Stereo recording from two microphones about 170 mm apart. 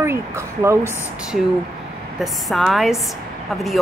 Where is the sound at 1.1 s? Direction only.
5° right (ahead or behind).